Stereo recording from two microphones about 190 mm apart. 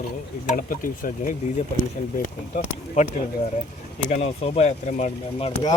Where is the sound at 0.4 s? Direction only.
45° left (ahead or behind).